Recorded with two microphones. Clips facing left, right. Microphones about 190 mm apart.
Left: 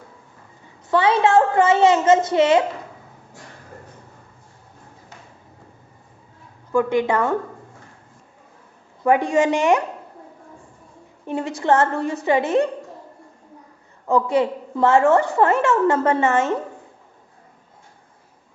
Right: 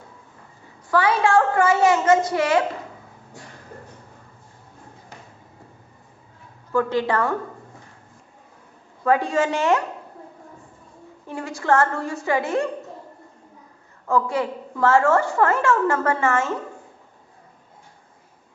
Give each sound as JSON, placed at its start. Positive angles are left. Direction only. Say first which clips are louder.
{"t": 0.9, "sound": "a woman's voice", "louder": "left 2 dB", "side_deg": 25}
{"t": 6.7, "sound": "a woman's voice", "louder": "left 2 dB", "side_deg": 15}
{"t": 9.0, "sound": "a woman's voice", "louder": "left 3 dB", "side_deg": 15}
{"t": 11.3, "sound": "a woman's voice", "louder": "left 3 dB", "side_deg": 20}
{"t": 14.1, "sound": "a woman's voice", "louder": "left 4 dB", "side_deg": 20}